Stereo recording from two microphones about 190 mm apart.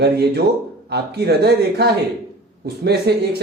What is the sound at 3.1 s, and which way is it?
Speech, 60° right (ahead or behind).